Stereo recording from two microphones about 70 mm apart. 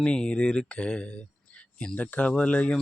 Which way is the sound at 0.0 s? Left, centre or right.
Centre.